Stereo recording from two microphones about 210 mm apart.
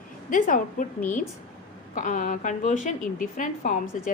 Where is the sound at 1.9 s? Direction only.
40° left (ahead or behind).